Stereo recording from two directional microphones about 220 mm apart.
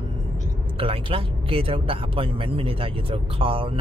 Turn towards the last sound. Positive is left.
turn(degrees=-25)  # may be behind; listen again after turning